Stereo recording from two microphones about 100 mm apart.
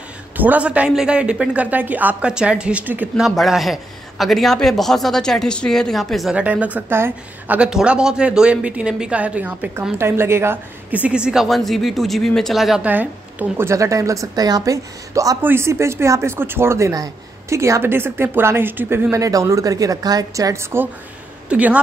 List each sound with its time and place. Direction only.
0.4 s a woman's voice: 15° right (ahead or behind)
3.2 s a man's voice: centre (ahead or behind)
6.3 s a woman's voice: 15° right (ahead or behind)
11.4 s a man's voice: centre (ahead or behind)
12.8 s a woman's voice: 15° right (ahead or behind)
19.1 s a woman's voice: 35° right (ahead or behind)
21.5 s speech: 15° right (ahead or behind)